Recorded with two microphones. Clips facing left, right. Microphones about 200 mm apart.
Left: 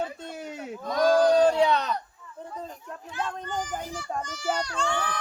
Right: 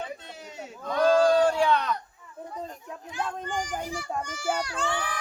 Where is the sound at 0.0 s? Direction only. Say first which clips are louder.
Left 5 dB; 50° left (ahead or behind).